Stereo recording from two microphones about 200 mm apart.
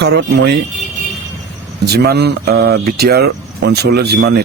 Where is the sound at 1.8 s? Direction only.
55° right (ahead or behind).